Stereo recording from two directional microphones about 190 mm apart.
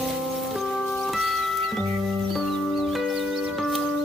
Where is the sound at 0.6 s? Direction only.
Centre (ahead or behind).